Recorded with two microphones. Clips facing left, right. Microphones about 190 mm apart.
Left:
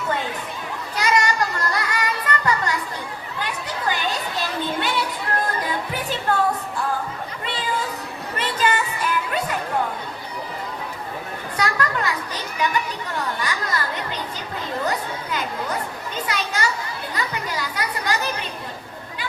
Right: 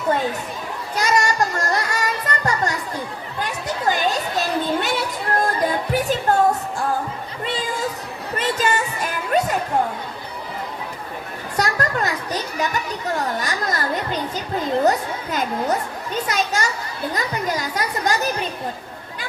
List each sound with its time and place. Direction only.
0.9 s music: 45° right (ahead or behind)
3.4 s a sound: 45° right (ahead or behind)
5.9 s music: 45° right (ahead or behind)
8.4 s music: 45° right (ahead or behind)
11.5 s children playing: 45° right (ahead or behind)